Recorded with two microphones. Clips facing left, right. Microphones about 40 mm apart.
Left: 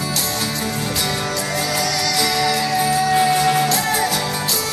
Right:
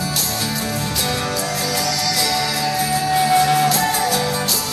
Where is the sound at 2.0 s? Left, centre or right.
Left; by 3.6 s centre.